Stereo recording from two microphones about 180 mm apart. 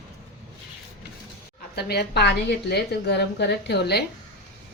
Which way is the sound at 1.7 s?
60° left (ahead or behind).